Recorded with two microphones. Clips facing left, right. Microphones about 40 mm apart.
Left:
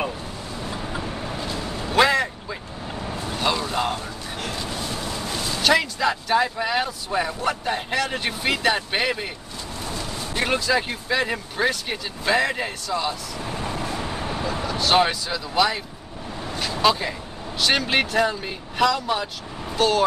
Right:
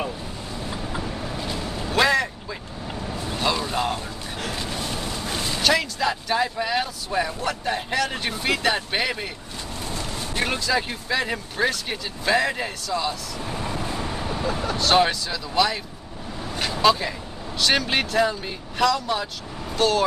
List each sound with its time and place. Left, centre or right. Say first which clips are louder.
0.7 s vehicle: left 1 dB; left
0.9 s vehicle: even; centre
1.9 s a sound: left 1 dB; centre
3.5 s a sound: even; centre
5.3 s vehicle: right 1 dB; right
5.7 s speech: left 2 dB; centre
10.3 s speech: left 2 dB; centre
13.5 s vehicle: left 1 dB; centre
14.4 s vehicle: right 2 dB; left
14.8 s speech: even; centre